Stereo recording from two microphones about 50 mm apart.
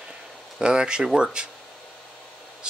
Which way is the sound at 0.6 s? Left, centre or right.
Centre.